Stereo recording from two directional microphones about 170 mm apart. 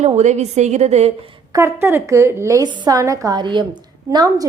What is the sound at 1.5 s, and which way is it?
A woman's voice, 15° right (ahead or behind).